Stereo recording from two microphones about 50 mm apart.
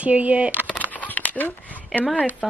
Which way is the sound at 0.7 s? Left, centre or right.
Left.